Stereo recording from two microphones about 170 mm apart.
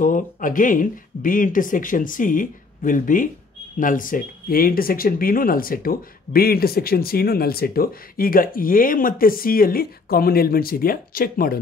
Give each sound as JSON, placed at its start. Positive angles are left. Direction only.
{"t": 0.0, "sound": "speech", "side_deg": 50}